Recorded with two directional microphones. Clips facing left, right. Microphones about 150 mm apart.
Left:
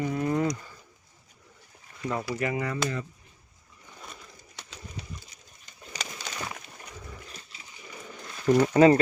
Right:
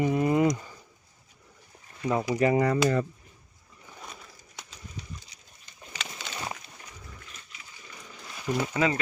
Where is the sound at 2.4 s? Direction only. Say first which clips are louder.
Right 9 dB; 40° right (ahead or behind).